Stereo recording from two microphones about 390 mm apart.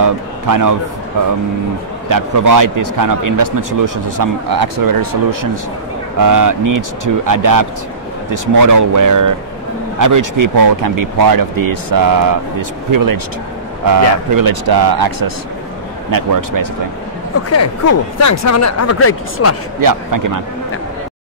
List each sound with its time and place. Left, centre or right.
0.0 s a man's voice: right
2.0 s a man's voice: right
17.5 s speech: left
19.8 s a man's voice: right